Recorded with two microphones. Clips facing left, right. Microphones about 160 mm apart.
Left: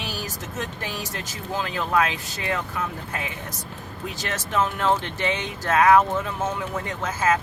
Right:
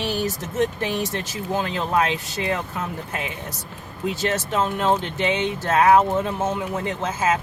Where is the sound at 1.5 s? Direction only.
25° right (ahead or behind).